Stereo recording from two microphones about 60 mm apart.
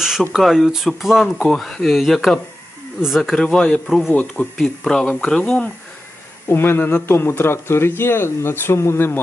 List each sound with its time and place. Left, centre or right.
0.0 s a sound: centre
0.3 s speech: centre
4.1 s speech: left
4.5 s speech: centre
6.5 s speech: left